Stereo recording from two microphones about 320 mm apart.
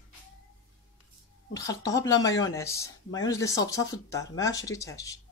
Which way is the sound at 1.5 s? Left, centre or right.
Centre.